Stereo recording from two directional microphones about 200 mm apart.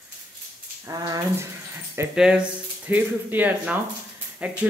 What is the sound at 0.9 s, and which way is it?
Speech, 20° right (ahead or behind).